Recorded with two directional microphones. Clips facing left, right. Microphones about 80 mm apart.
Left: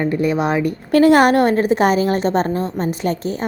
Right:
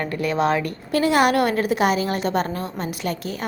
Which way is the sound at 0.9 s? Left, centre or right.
Left.